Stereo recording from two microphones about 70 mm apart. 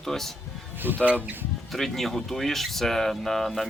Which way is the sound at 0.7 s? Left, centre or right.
Right.